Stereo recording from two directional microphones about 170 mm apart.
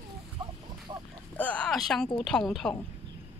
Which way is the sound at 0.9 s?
25° right (ahead or behind).